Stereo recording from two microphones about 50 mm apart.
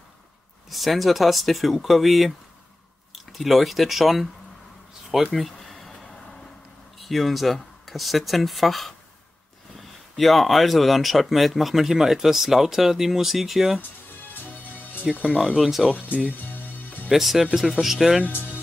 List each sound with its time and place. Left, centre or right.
0.7 s speech: centre
5.3 s a sound: centre
7.0 s speech: centre
15.3 s speech: centre
17.1 s speech: centre